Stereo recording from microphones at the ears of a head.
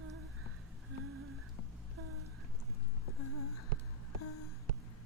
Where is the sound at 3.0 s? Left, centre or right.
Left.